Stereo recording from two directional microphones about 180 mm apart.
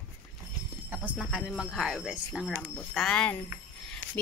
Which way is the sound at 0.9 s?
5° right (ahead or behind).